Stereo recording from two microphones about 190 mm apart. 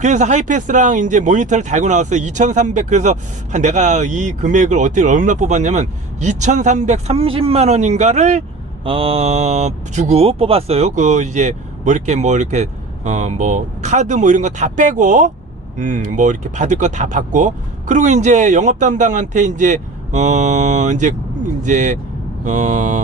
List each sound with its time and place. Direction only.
0.0 s speech: 40° right (ahead or behind)